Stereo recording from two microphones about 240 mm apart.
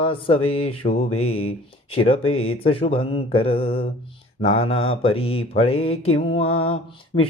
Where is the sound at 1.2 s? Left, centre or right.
Left.